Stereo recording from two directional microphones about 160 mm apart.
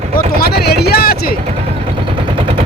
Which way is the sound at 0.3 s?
75° left (ahead or behind).